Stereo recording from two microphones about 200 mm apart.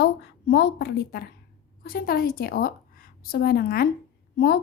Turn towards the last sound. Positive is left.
turn(degrees=50)  # may be behind; listen again after turning